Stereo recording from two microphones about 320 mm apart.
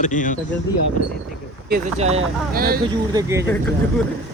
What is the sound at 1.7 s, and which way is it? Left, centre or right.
Speech, centre.